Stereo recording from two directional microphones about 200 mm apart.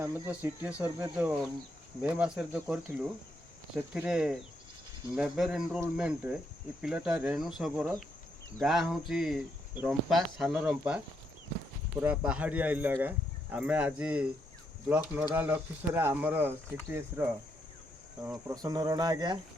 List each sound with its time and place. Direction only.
0.0 s speech: 10° right (ahead or behind)